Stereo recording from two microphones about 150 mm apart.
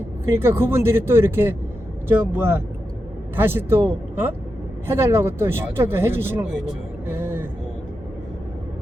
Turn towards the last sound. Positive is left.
turn(degrees=-15)  # may be behind; listen again after turning